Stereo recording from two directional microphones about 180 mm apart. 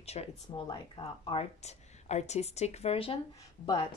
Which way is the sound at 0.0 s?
35° left (ahead or behind).